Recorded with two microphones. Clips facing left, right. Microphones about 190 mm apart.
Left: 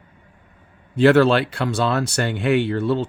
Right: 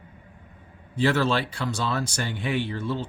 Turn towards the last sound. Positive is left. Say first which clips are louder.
# left 8 dB
turn(degrees=70)  # may be behind; listen again after turning